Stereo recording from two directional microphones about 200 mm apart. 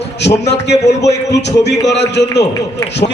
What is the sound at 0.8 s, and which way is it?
Speech, 60° left (ahead or behind).